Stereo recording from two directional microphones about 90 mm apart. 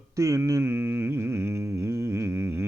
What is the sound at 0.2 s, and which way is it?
Mantra, 35° right (ahead or behind).